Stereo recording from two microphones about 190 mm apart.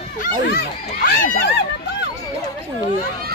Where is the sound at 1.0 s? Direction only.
50° left (ahead or behind).